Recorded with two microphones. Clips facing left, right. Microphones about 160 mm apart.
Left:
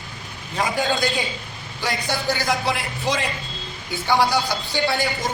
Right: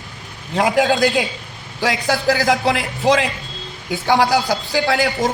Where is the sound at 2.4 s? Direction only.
90° right.